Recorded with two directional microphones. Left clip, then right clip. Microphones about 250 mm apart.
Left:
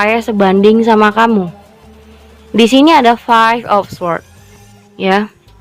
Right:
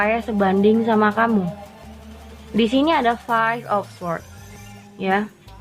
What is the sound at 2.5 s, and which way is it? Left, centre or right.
Speech, left.